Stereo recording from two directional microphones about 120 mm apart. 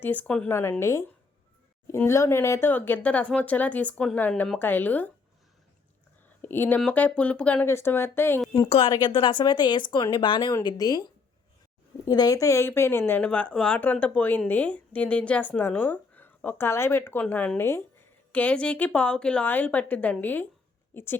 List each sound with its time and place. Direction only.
0.0 s a woman's voice: 15° left (ahead or behind)
0.4 s a woman's voice: 20° left (ahead or behind)
6.4 s a woman's voice: 15° left (ahead or behind)
8.9 s a woman's voice: 40° left (ahead or behind); by 21.2 s 20° left (ahead or behind)